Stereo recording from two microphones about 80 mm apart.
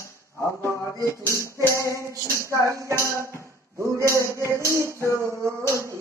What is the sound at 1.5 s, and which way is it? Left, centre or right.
Music, left.